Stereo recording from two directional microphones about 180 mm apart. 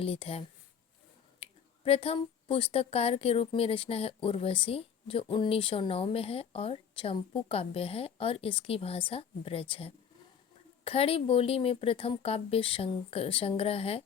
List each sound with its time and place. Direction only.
0.0 s speech: 30° left (ahead or behind)